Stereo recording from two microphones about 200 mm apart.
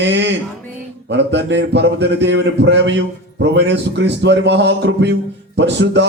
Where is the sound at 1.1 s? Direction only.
60° right (ahead or behind).